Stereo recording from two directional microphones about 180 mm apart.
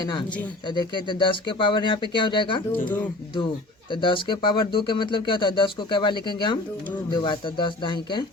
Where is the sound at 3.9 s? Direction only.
25° left (ahead or behind).